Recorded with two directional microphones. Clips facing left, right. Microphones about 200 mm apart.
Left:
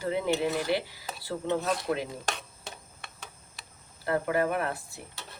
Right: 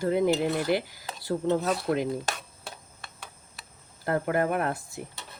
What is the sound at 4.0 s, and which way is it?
Speech, 45° right (ahead or behind).